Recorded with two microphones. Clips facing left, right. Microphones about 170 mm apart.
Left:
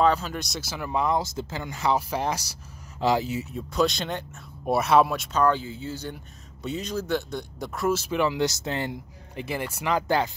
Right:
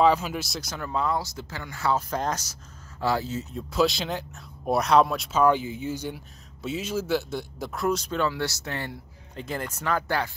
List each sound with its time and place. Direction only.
0.0 s speech: 10° right (ahead or behind); by 3.4 s 15° left (ahead or behind)
3.5 s speech: centre (ahead or behind); by 9.4 s 20° left (ahead or behind)
9.5 s speech: 10° left (ahead or behind)